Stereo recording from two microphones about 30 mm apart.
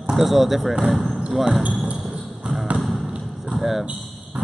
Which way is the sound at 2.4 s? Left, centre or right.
Centre.